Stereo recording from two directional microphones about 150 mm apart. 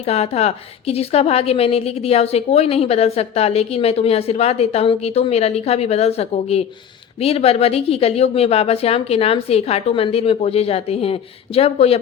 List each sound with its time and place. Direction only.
0.0 s a woman's voice: 45° left (ahead or behind)